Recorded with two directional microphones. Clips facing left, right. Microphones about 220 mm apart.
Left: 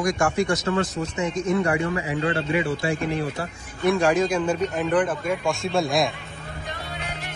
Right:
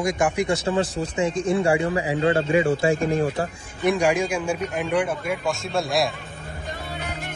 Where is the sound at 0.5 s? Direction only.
30° right (ahead or behind).